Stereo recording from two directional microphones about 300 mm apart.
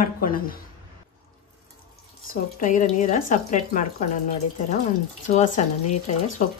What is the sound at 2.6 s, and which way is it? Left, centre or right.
Speech, left.